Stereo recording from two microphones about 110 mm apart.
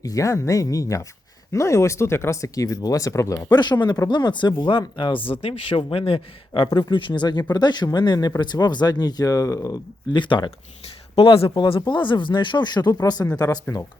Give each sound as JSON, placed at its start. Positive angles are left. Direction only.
{"t": 0.0, "sound": "speech", "side_deg": 30}
{"t": 11.1, "sound": "speech", "side_deg": 60}